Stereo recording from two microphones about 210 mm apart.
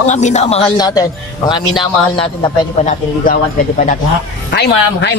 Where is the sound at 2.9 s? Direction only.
40° left (ahead or behind).